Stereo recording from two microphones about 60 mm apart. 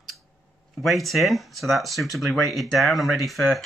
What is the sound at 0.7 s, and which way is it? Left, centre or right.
Speech, centre.